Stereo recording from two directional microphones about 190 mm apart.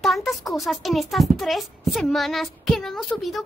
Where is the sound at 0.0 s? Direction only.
Centre (ahead or behind).